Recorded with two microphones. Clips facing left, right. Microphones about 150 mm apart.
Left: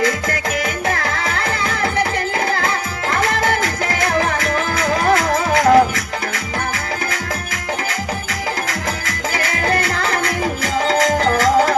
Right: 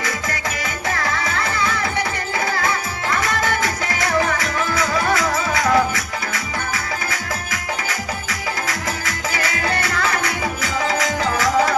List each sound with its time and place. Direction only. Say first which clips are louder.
0.3 s music: left 5 dB; 60° left (ahead or behind)
4.4 s music: left 3 dB; 55° left (ahead or behind)
9.5 s music: left 5 dB; 50° left (ahead or behind)